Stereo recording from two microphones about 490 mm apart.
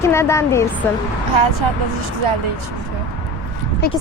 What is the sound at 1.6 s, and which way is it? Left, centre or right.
Speech, right.